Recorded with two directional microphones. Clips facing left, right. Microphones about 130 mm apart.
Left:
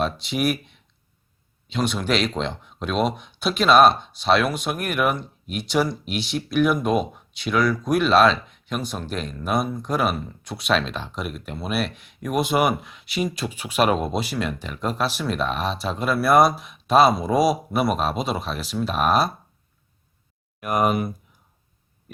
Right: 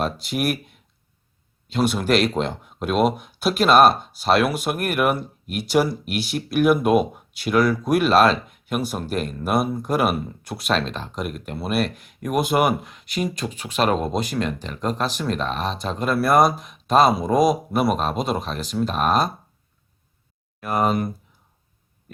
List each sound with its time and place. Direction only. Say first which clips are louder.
0.0 s speech: even; centre (ahead or behind)
1.7 s speech: right 3 dB; 5° right (ahead or behind)
20.6 s speech: even; 15° left (ahead or behind)